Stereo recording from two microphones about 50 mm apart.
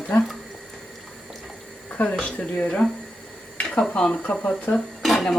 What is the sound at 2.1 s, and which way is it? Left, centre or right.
Speech, left.